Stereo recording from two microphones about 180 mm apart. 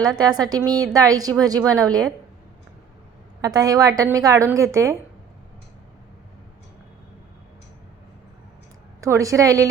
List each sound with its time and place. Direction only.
0.0 s a woman's voice: 20° right (ahead or behind)
3.4 s a woman's voice: 20° right (ahead or behind)
9.0 s a woman's voice: 15° right (ahead or behind)